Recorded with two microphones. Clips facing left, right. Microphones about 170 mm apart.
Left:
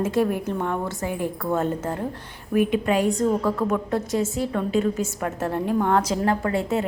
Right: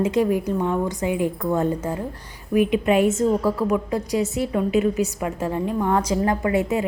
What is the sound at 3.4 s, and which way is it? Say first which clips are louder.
Speech: right 2 dB; 10° right (ahead or behind).